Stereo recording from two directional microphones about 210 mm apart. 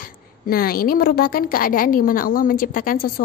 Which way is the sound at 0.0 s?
45° left (ahead or behind).